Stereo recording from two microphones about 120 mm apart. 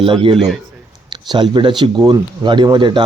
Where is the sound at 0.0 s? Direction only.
45° right (ahead or behind).